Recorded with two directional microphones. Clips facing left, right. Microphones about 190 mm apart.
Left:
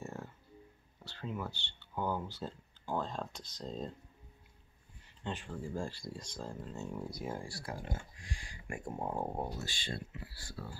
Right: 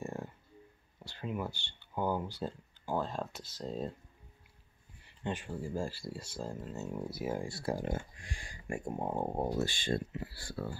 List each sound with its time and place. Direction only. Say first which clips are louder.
0.0 s a sound: right 4 dB; 15° right (ahead or behind)
1.0 s speech: right 3 dB; 15° right (ahead or behind)
5.2 s speech: right 3 dB; 10° right (ahead or behind)
7.4 s speech: right 8 dB; 25° right (ahead or behind)
7.7 s speech: right 7 dB; 50° right (ahead or behind)
8.8 s speech: right 2 dB; 20° right (ahead or behind)
9.6 s speech: right 9 dB; 50° right (ahead or behind)
10.3 s speech: right 7 dB; 60° right (ahead or behind)